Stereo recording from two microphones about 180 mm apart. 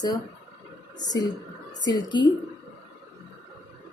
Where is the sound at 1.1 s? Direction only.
20° left (ahead or behind).